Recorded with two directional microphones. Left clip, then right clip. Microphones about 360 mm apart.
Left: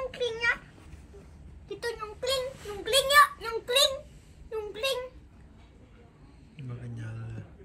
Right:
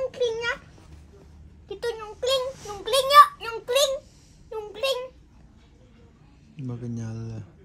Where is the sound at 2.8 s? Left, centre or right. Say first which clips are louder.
Right 6 dB; centre.